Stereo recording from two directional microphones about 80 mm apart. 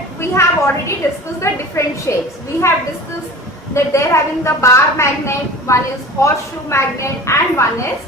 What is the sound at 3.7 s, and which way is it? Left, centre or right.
A woman's voice, left.